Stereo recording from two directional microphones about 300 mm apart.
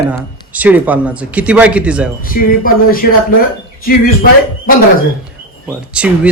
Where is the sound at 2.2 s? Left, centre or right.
Left.